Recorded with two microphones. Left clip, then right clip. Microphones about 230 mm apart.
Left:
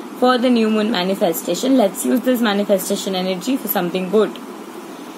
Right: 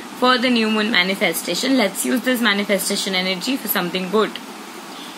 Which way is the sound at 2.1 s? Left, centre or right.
Right.